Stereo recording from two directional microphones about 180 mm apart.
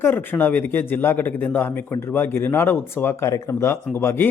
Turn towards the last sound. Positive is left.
turn(degrees=10)  # may be behind; listen again after turning